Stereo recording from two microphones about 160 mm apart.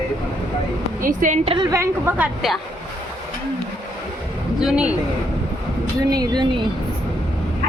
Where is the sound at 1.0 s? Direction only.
55° right (ahead or behind).